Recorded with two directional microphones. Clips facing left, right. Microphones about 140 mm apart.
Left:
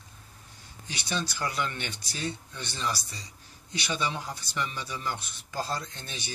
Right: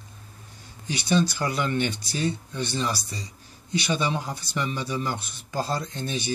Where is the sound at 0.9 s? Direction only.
10° right (ahead or behind).